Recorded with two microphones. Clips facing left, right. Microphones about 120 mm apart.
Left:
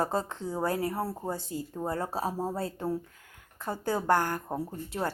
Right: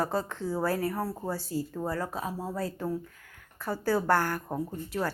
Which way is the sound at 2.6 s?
25° left (ahead or behind).